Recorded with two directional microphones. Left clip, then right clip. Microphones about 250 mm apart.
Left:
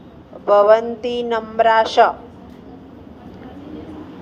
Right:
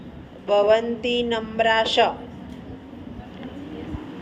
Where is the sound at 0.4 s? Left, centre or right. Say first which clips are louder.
Left 6 dB; left.